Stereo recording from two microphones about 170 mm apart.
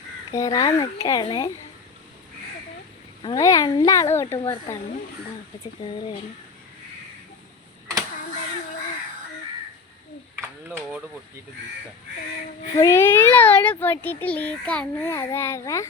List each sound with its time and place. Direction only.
0.3 s speech: 20° left (ahead or behind)
3.2 s speech: 20° left (ahead or behind)
10.7 s speech: 10° right (ahead or behind)
12.7 s a child's voice: 15° left (ahead or behind)